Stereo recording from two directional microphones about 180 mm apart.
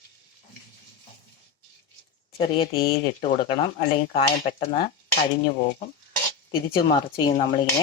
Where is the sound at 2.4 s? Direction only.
30° left (ahead or behind).